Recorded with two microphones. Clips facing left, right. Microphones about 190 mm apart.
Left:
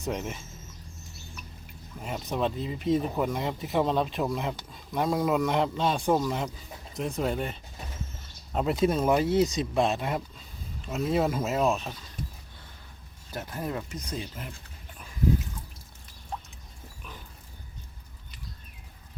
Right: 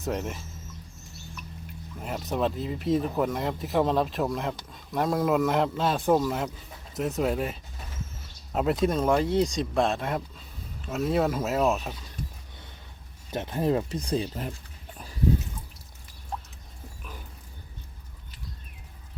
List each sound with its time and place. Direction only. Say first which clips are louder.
0.0 s speech: right 2 dB; centre (ahead or behind)
2.0 s speech: right 1 dB; centre (ahead or behind)
13.3 s speech: right 8 dB; 25° right (ahead or behind)
14.9 s a sound: right 3 dB; 35° right (ahead or behind)